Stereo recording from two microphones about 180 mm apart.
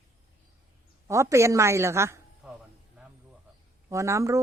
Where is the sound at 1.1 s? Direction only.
15° right (ahead or behind).